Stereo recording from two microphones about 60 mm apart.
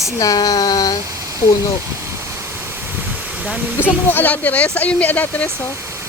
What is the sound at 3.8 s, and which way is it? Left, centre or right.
Speech, left.